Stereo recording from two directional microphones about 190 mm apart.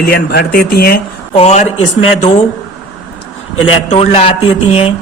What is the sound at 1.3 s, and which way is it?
A man's voice, 35° left (ahead or behind).